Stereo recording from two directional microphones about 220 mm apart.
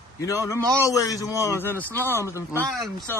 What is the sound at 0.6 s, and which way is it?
Speech, 15° right (ahead or behind).